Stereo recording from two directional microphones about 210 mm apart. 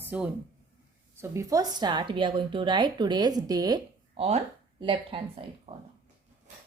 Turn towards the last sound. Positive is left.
turn(degrees=-25)  # may be behind; listen again after turning